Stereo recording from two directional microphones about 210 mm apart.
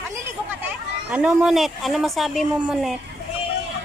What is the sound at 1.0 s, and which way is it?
Speech, 5° right (ahead or behind).